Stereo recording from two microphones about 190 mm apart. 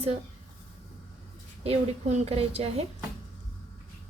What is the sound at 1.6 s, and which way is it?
A woman's voice, 35° right (ahead or behind).